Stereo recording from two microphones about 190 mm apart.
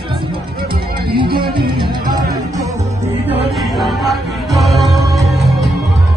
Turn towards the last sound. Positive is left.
turn(degrees=0)  # may be behind; listen again after turning